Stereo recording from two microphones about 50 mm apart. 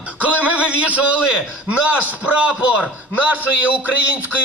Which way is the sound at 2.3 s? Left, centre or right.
Right.